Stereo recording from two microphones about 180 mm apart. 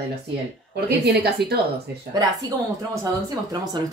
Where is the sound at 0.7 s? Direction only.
65° right (ahead or behind).